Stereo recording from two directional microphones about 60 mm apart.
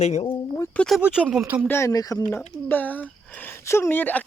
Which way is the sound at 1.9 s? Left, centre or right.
Left.